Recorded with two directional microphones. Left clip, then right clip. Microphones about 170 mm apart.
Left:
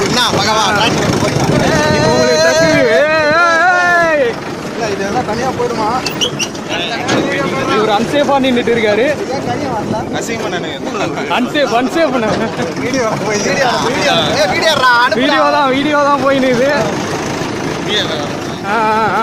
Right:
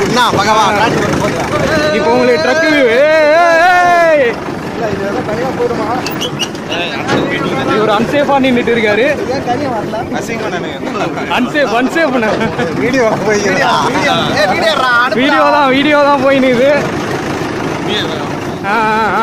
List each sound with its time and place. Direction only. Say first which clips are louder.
0.1 s speech: right 3 dB; 25° right (ahead or behind)
2.9 s vehicle: right 3 dB; 15° right (ahead or behind)
7.9 s speech: right 2 dB; 5° left (ahead or behind)
11.3 s speech: right 1 dB; 5° left (ahead or behind)
12.9 s speech: right 4 dB; 60° right (ahead or behind)
14.6 s speech: left 3 dB; 15° left (ahead or behind)
15.1 s speech: right 2 dB; centre (ahead or behind)
18.7 s speech: right 1 dB; 5° right (ahead or behind)